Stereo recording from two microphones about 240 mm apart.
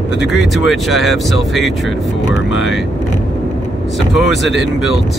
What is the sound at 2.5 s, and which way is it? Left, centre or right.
Speech, left.